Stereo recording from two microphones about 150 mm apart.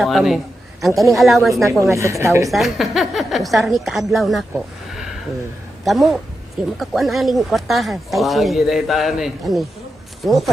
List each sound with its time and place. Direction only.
0.0 s speech: centre (ahead or behind)
1.8 s a woman's voice: 20° right (ahead or behind)
2.5 s speech: centre (ahead or behind)